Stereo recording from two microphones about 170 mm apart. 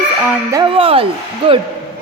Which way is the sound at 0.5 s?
30° right (ahead or behind).